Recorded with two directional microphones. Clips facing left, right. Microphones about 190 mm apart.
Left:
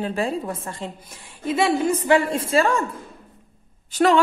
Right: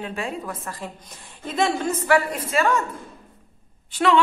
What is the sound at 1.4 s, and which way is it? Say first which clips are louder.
Speech: left 3 dB; 10° left (ahead or behind).